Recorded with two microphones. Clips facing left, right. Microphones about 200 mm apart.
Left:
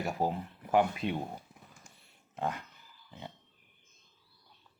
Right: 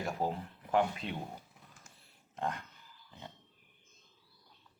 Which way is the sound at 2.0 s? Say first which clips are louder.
Left 2 dB; 5° left (ahead or behind).